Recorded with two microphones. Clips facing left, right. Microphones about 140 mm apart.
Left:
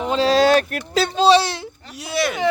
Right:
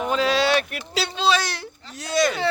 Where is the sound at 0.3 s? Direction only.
40° left (ahead or behind).